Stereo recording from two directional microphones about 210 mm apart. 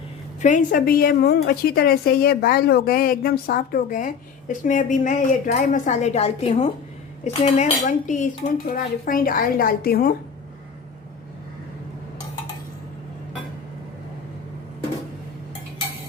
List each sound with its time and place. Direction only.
0.4 s a woman's voice: 40° left (ahead or behind)